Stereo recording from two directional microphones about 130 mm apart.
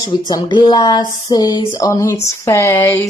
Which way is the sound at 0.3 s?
35° left (ahead or behind).